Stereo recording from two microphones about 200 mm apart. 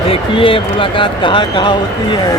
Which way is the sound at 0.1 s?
25° left (ahead or behind).